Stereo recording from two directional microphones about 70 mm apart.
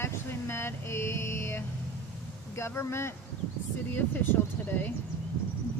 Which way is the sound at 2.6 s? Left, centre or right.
Left.